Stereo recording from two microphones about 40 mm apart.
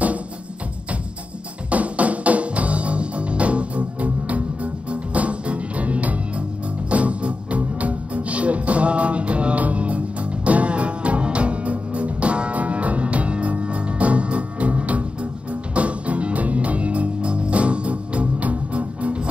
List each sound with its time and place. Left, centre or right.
1.7 s music: right